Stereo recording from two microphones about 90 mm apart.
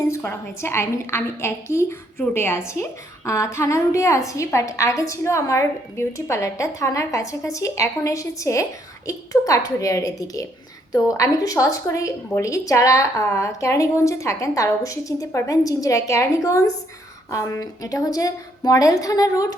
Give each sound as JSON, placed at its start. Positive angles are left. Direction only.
{"t": 0.1, "sound": "a woman's voice", "side_deg": 30}